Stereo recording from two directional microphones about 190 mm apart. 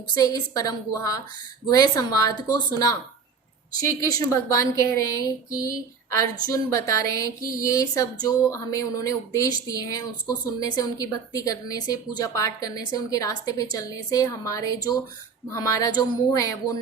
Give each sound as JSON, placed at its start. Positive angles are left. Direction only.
{"t": 0.1, "sound": "speech", "side_deg": 20}